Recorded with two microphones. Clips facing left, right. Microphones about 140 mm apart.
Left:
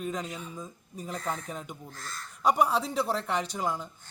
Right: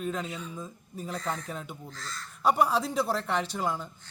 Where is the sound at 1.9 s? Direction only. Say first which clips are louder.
Right 1 dB; 50° left (ahead or behind).